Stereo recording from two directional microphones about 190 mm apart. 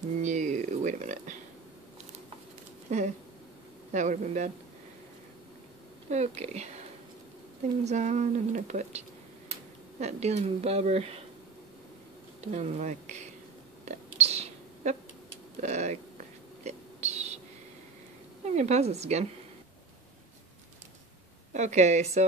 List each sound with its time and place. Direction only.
0.2 s a sound: 40° right (ahead or behind)
2.9 s a sound: 40° right (ahead or behind)
3.9 s speech: 40° right (ahead or behind)
6.0 s speech: 35° right (ahead or behind)
7.8 s speech: 35° right (ahead or behind)
12.4 s speech: 35° right (ahead or behind)
13.8 s whispering: 35° right (ahead or behind)
15.6 s speech: 35° right (ahead or behind)
16.6 s a sound: 35° right (ahead or behind)
18.4 s a woman's voice: 35° right (ahead or behind)
21.5 s speech: 35° right (ahead or behind)